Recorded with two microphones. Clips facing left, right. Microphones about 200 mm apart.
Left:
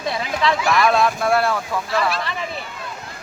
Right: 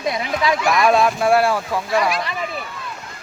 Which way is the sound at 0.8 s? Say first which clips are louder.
Right 3 dB; 15° right (ahead or behind).